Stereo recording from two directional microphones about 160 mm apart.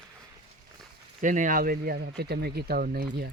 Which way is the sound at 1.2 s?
55° right (ahead or behind).